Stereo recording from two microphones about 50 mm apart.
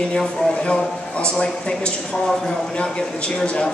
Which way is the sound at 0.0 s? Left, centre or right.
Centre.